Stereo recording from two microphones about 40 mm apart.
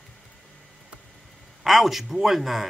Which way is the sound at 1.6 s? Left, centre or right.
Centre.